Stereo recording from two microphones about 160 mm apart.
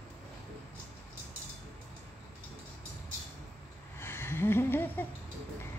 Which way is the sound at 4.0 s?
15° left (ahead or behind).